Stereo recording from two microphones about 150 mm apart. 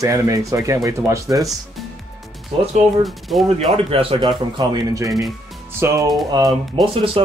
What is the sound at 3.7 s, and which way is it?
Speech, 40° right (ahead or behind).